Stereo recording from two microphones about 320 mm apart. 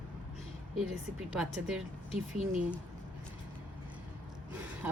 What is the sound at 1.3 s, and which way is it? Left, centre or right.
Speech, centre.